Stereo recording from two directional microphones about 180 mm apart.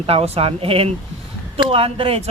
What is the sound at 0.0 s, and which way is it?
Speech, 30° right (ahead or behind).